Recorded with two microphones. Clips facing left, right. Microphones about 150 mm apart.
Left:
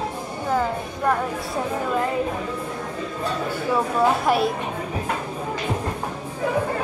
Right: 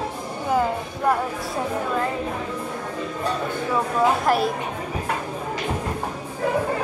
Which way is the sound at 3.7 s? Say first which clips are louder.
Left 1 dB; centre (ahead or behind).